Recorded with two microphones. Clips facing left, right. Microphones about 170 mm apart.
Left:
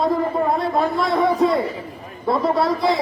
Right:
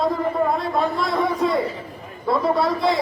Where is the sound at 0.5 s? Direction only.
Centre (ahead or behind).